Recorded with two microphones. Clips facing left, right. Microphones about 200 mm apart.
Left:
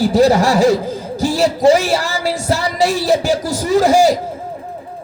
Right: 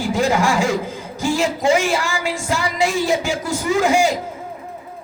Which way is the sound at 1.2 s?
35° left (ahead or behind).